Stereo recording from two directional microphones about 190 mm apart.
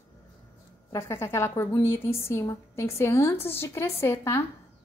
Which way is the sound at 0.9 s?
15° left (ahead or behind).